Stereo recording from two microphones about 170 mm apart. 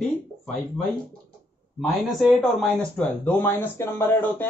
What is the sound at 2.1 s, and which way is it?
Speech, centre (ahead or behind).